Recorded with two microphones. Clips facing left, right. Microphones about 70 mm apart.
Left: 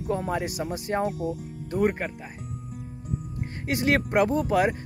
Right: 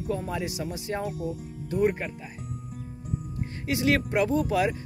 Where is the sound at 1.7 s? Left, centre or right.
Left.